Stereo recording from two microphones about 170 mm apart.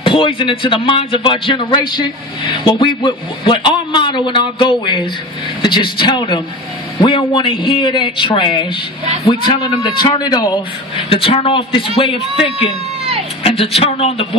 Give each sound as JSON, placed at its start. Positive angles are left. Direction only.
{"t": 0.0, "sound": "a man's voice", "side_deg": 30}